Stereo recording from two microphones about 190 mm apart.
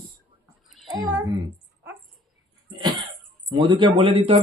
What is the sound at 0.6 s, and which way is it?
Child singing, centre (ahead or behind).